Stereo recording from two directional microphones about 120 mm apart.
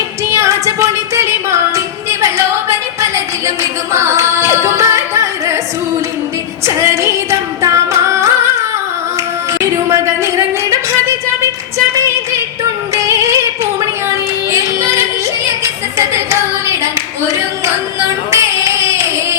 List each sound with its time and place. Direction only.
0.3 s music: 25° right (ahead or behind)
6.8 s music: 25° right (ahead or behind)
9.5 s speech: 25° right (ahead or behind)
12.9 s music: 25° right (ahead or behind)
15.6 s clapping: 25° right (ahead or behind)
18.3 s singing: 25° right (ahead or behind)